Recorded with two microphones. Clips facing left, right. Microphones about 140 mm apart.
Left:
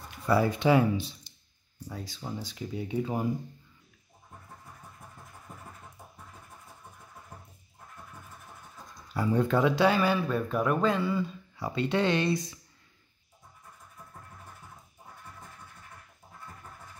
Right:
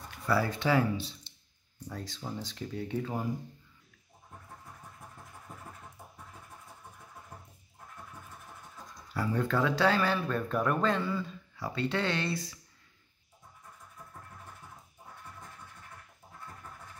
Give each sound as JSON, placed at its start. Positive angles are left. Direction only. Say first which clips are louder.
{"t": 0.3, "sound": "speech", "louder": "left 5 dB", "side_deg": 20}
{"t": 1.9, "sound": "speech", "louder": "left 1 dB", "side_deg": 5}
{"t": 9.1, "sound": "speech", "louder": "left 4 dB", "side_deg": 20}